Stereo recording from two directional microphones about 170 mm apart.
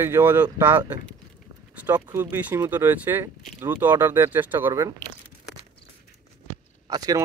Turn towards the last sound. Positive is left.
turn(degrees=-20)  # may be behind; listen again after turning